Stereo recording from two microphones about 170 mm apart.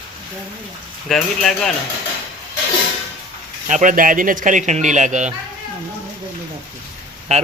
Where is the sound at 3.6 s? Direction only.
50° right (ahead or behind).